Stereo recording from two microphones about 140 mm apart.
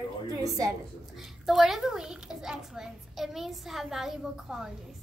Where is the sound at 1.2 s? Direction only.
Centre (ahead or behind).